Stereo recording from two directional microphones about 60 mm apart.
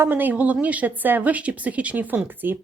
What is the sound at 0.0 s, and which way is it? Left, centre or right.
A woman's voice, right.